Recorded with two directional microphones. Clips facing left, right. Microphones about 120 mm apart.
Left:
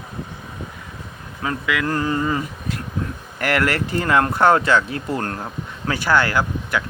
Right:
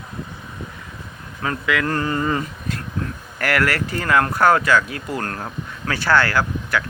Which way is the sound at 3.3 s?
20° left (ahead or behind).